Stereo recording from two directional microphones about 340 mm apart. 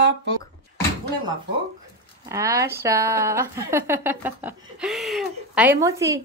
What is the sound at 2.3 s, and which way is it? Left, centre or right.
Speech, centre.